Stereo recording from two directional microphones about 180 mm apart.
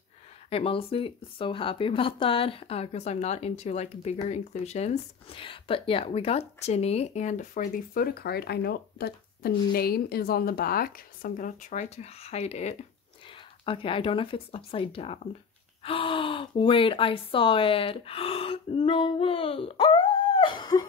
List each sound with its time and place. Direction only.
0.5 s speech: 30° left (ahead or behind)